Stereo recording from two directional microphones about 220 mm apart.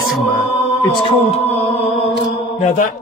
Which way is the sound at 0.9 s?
25° left (ahead or behind).